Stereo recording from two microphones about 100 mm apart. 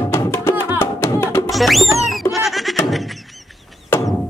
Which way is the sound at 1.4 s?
Centre (ahead or behind).